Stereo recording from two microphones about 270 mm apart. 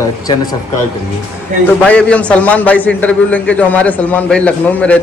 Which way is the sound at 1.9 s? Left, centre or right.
Centre.